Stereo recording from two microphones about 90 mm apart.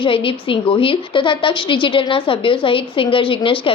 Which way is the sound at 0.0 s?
80° left.